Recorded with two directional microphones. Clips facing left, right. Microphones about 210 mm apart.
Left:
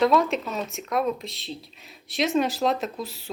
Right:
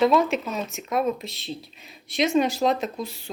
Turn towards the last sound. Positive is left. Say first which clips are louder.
# right 1 dB
turn(degrees=0)  # may be behind; listen again after turning